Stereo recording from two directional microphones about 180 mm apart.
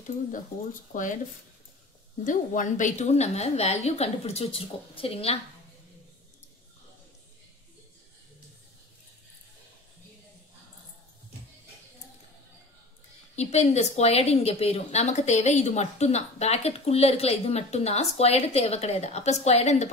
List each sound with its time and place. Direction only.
0.9 s speech: 50° left (ahead or behind)
2.2 s a woman's voice: 45° left (ahead or behind)
13.4 s a woman's voice: 40° left (ahead or behind)